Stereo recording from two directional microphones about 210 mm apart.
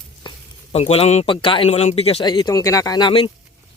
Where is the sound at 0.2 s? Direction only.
20° left (ahead or behind).